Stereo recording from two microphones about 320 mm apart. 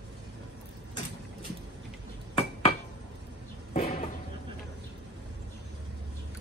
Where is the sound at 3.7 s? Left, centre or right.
Centre.